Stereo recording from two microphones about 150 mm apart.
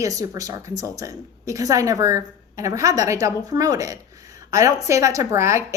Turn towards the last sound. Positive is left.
turn(degrees=-20)  # may be behind; listen again after turning